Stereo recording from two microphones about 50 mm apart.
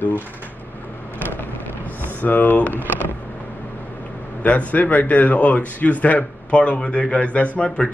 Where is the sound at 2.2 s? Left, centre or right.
Left.